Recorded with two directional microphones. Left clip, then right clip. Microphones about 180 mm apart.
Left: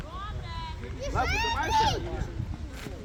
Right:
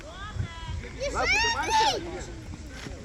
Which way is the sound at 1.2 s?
35° right (ahead or behind).